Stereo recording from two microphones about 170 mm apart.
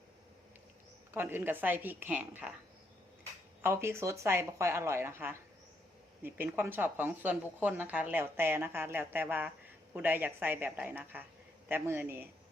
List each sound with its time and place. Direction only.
1.1 s a woman's voice: 10° right (ahead or behind)
3.6 s a woman's voice: 15° right (ahead or behind)